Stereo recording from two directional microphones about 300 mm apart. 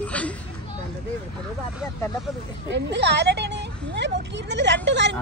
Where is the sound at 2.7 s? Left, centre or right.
Right.